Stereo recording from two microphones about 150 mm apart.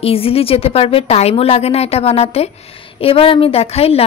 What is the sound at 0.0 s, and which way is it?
A woman's voice, 40° left (ahead or behind).